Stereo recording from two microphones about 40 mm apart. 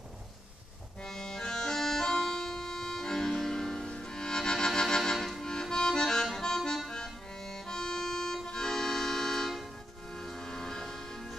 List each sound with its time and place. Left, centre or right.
1.0 s accordion: centre
5.1 s accordion: centre
5.4 s accordion: centre
6.4 s music: centre
8.5 s accordion: centre
10.1 s music: centre